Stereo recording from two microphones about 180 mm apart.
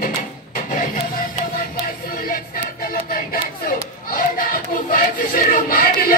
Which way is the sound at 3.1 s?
50° left (ahead or behind).